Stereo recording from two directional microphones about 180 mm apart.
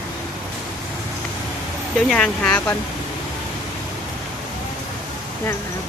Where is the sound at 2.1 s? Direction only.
5° left (ahead or behind).